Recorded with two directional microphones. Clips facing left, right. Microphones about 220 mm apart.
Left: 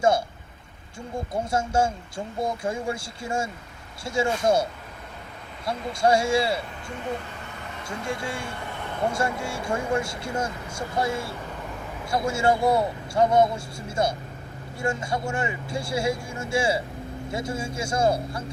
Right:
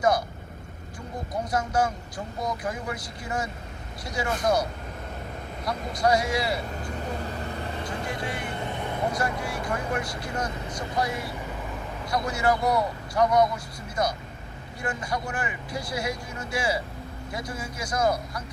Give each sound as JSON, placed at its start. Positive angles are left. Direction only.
{"t": 1.3, "sound": "speech", "side_deg": 25}
{"t": 7.2, "sound": "vehicle", "side_deg": -35}
{"t": 7.9, "sound": "speech", "side_deg": 25}